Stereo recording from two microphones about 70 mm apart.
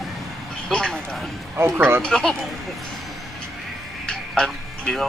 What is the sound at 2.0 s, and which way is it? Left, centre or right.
Speech, centre.